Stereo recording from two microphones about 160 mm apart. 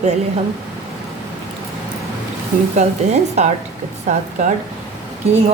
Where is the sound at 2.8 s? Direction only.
45° right (ahead or behind).